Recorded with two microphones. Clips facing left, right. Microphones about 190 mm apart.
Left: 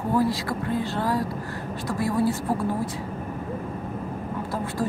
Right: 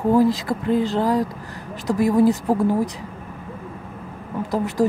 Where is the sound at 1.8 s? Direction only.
20° right (ahead or behind).